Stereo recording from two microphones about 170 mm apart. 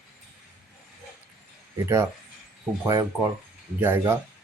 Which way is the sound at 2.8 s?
20° right (ahead or behind).